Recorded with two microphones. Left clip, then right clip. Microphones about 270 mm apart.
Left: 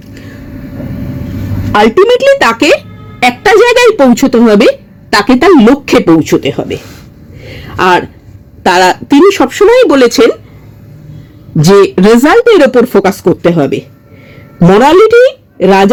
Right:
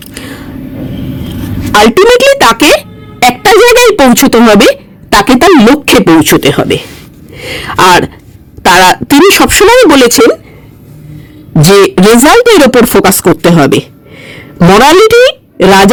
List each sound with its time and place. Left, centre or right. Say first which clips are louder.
0.0 s vehicle: right 7 dB; right
1.7 s speech: right 2 dB; right
3.2 s a sound: right 2 dB; right
4.1 s speech: right 3 dB; right
7.3 s a sound: right 6 dB; right
8.6 s speech: right 3 dB; right
11.6 s speech: right 1 dB; right